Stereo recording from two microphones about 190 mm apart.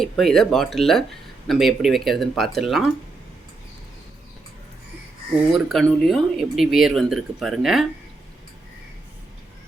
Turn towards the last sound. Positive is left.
turn(degrees=0)  # may be behind; listen again after turning